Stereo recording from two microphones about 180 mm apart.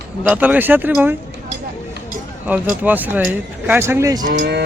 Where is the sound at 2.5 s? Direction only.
10° right (ahead or behind).